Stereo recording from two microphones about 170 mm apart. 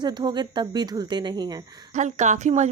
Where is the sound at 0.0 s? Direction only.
25° right (ahead or behind).